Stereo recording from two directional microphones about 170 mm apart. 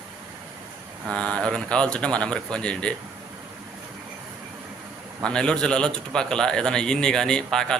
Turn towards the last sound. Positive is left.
turn(degrees=5)  # may be behind; listen again after turning